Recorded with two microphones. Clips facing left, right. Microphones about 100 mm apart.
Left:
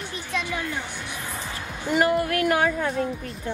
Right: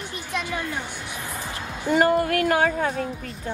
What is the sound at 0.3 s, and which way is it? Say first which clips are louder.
Music: even; 20° right (ahead or behind).